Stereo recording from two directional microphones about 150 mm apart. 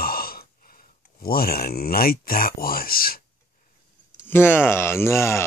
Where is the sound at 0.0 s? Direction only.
85° left.